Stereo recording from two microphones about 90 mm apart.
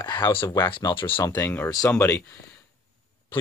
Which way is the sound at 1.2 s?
40° left (ahead or behind).